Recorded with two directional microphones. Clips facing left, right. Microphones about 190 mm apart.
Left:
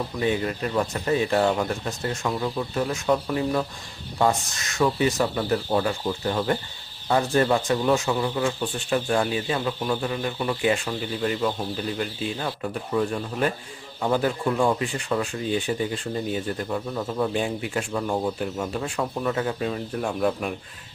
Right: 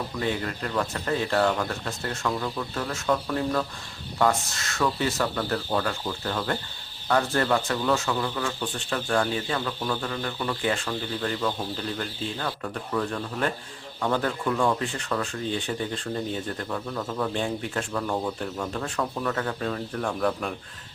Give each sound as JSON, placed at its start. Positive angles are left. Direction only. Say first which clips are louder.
{"t": 0.2, "sound": "speech", "louder": "left 4 dB", "side_deg": 15}